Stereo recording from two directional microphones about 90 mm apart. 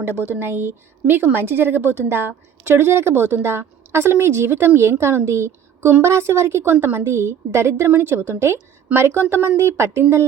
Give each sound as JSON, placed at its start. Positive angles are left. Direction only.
{"t": 0.0, "sound": "speech", "side_deg": -25}